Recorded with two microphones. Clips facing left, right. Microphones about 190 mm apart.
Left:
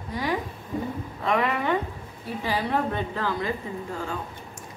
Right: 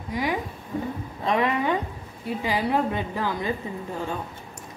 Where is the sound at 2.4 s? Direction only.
15° right (ahead or behind).